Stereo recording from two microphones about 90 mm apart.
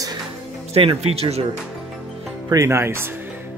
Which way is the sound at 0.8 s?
90° right.